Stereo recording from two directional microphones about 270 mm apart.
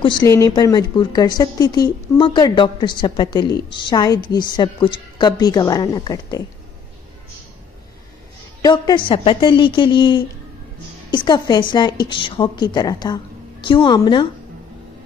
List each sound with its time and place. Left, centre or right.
0.0 s a woman's voice: centre
8.6 s a woman's voice: centre